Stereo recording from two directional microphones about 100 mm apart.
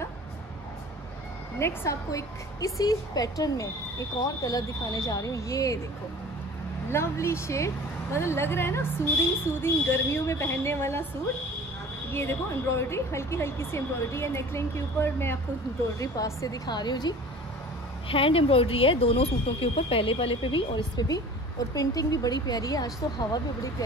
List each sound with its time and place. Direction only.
1.6 s a woman's voice: 25° left (ahead or behind)
6.9 s speech: 25° left (ahead or behind)
12.1 s a woman's voice: 25° left (ahead or behind)
16.6 s a woman's voice: 45° left (ahead or behind)
18.0 s speech: 65° left (ahead or behind)
21.7 s a woman's voice: 40° left (ahead or behind)